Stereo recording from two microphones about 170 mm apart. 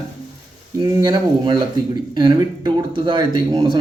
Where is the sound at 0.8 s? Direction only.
25° right (ahead or behind).